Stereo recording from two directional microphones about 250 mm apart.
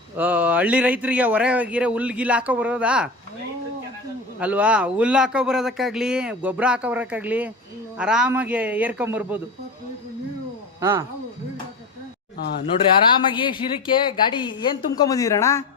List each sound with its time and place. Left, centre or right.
0.2 s speech: centre
4.4 s a man's voice: centre
10.8 s speech: centre
12.4 s speech: left
13.2 s a woman's voice: centre